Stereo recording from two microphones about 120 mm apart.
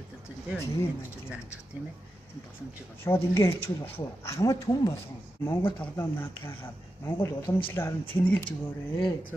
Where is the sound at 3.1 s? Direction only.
20° left (ahead or behind).